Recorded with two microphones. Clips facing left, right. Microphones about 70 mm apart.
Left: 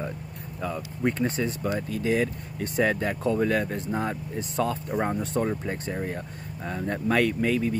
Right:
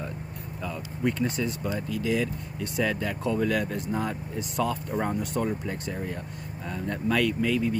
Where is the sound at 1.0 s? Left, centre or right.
Left.